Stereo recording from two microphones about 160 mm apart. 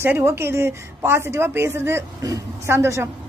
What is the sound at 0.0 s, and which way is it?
A woman's voice, 15° right (ahead or behind).